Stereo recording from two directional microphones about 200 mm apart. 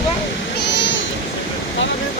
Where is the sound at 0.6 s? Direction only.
65° left (ahead or behind).